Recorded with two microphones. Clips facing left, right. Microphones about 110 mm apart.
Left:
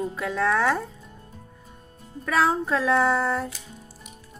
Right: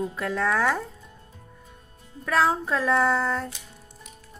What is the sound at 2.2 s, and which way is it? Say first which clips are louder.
Music: even; centre (ahead or behind).